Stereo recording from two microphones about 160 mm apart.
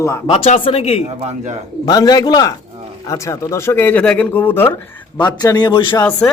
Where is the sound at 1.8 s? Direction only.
25° left (ahead or behind).